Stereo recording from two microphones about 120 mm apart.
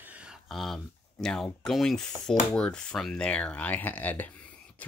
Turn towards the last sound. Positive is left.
turn(degrees=15)  # may be behind; listen again after turning